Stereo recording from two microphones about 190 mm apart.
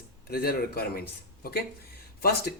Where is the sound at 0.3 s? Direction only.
50° left (ahead or behind).